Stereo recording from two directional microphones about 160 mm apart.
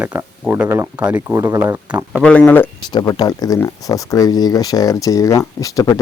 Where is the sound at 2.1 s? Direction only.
5° left (ahead or behind).